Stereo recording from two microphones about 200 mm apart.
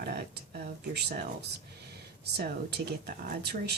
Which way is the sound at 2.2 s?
55° right (ahead or behind).